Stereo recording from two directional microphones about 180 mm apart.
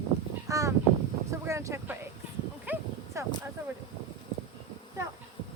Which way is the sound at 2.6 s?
10° right (ahead or behind).